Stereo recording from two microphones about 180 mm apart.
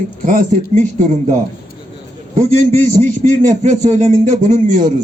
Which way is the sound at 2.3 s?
45° right (ahead or behind).